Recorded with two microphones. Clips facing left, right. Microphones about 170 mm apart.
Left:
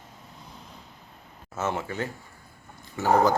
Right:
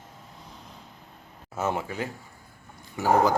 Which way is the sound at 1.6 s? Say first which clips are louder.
Right 1 dB; 10° right (ahead or behind).